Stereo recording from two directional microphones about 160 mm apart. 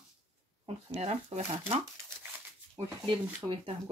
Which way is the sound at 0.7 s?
45° right (ahead or behind).